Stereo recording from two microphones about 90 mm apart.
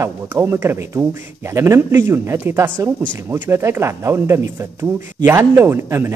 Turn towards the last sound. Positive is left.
turn(degrees=-25)  # may be behind; listen again after turning